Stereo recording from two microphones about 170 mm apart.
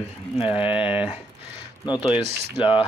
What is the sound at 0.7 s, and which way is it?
Speech, 5° right (ahead or behind).